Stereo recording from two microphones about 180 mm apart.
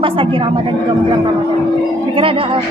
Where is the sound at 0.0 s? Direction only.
30° right (ahead or behind).